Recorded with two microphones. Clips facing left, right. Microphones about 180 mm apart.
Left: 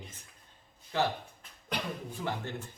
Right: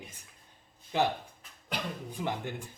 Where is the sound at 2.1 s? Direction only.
15° right (ahead or behind).